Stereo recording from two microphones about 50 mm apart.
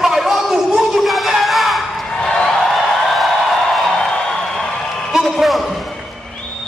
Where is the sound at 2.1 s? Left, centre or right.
Centre.